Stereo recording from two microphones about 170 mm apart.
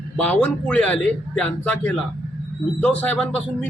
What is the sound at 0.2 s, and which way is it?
A man's voice, 10° left (ahead or behind).